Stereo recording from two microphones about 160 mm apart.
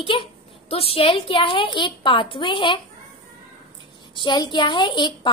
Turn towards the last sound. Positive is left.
turn(degrees=30)  # may be behind; listen again after turning